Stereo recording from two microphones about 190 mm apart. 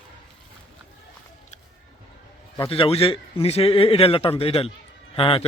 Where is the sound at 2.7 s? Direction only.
30° left (ahead or behind).